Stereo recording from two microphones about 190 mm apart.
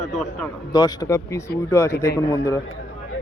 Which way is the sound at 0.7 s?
20° left (ahead or behind).